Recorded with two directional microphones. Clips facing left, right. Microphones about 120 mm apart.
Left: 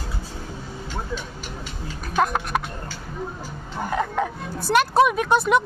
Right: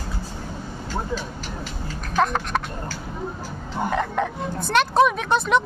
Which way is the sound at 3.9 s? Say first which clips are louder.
Left 1 dB; 5° left (ahead or behind).